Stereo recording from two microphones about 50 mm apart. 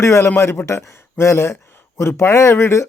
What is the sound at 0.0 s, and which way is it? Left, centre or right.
Speech, left.